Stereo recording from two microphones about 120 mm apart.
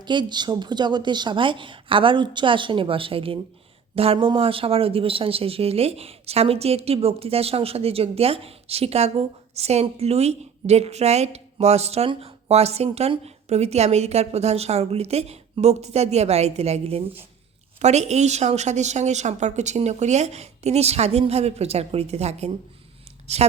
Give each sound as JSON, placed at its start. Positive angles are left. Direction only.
{"t": 0.0, "sound": "a woman's voice", "side_deg": -40}
{"t": 17.7, "sound": "a woman's voice", "side_deg": -70}